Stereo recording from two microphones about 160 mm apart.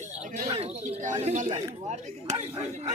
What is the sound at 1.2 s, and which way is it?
Speech, 45° right (ahead or behind).